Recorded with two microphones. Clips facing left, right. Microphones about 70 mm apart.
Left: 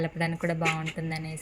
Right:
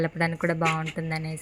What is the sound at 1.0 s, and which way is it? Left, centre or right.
Speech, right.